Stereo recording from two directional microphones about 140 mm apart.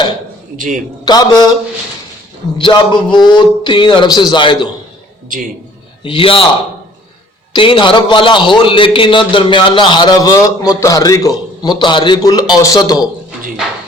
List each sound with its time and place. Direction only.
0.5 s a man's voice: 70° right (ahead or behind)
1.0 s a man's voice: 30° left (ahead or behind)
2.6 s a man's voice: 35° left (ahead or behind)
6.0 s a man's voice: 40° left (ahead or behind)
7.5 s a man's voice: 35° left (ahead or behind)